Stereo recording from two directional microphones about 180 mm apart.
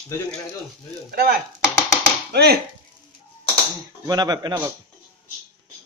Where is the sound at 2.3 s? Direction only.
65° right (ahead or behind).